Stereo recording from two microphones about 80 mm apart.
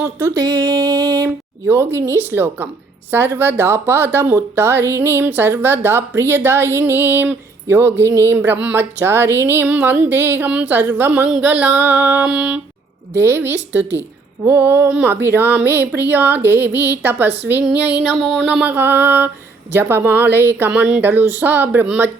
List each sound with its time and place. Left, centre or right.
0.0 s a woman's voice: right
0.3 s music: right
1.6 s a woman's voice: right; by 12.5 s centre
13.1 s a woman's voice: right
18.1 s a sound: centre
18.6 s a woman's voice: right
20.7 s a woman's voice: centre